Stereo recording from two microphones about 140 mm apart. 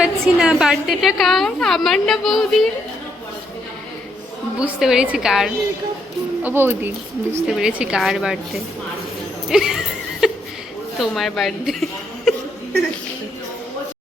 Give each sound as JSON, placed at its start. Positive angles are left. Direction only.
{"t": 0.0, "sound": "a woman's voice", "side_deg": -5}
{"t": 4.6, "sound": "a woman's voice", "side_deg": -5}
{"t": 6.4, "sound": "a woman's voice", "side_deg": -15}
{"t": 9.5, "sound": "a sound", "side_deg": -5}
{"t": 10.9, "sound": "a woman's voice", "side_deg": 0}